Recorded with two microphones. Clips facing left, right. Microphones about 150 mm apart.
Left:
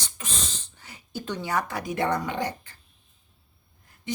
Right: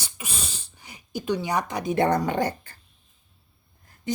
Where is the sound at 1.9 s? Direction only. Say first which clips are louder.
Right 5 dB; 40° right (ahead or behind).